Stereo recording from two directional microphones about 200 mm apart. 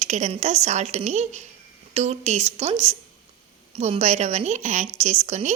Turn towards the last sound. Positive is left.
turn(degrees=-35)  # may be behind; listen again after turning